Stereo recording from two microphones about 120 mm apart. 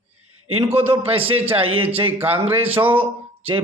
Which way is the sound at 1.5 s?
50° right (ahead or behind).